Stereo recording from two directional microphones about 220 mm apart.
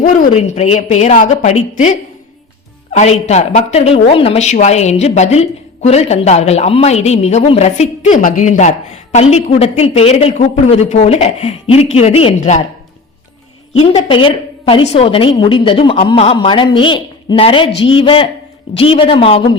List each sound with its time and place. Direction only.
0.0 s a woman's voice: 35° left (ahead or behind)
2.9 s a woman's voice: 30° left (ahead or behind)
13.7 s a woman's voice: 25° left (ahead or behind)
17.7 s speech: 60° left (ahead or behind)
18.0 s a woman's voice: 25° left (ahead or behind)